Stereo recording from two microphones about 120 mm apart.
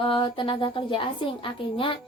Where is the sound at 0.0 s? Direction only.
45° left (ahead or behind).